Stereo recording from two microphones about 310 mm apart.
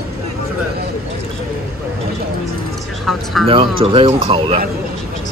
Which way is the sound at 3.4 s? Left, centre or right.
Centre.